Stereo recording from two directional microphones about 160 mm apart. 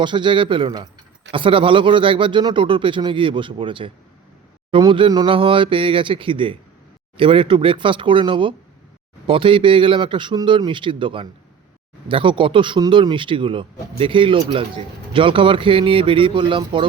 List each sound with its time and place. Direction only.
0.0 s speech: 30° right (ahead or behind)